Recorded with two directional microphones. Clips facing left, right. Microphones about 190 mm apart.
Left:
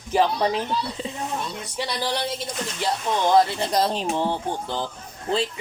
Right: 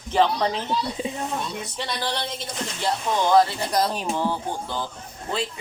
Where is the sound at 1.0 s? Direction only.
15° right (ahead or behind).